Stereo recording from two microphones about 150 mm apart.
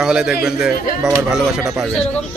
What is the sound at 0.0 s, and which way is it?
Speech, 5° right (ahead or behind).